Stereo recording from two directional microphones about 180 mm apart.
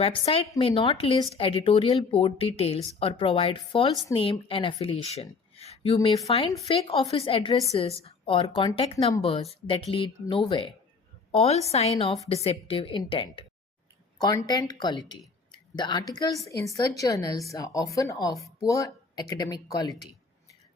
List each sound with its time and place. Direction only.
0.0 s speech: 30° left (ahead or behind)